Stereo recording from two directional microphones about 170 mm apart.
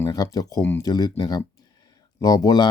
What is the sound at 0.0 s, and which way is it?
Speech, 20° left (ahead or behind).